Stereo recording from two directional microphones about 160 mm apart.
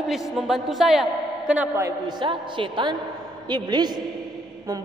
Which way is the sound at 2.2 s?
30° right (ahead or behind).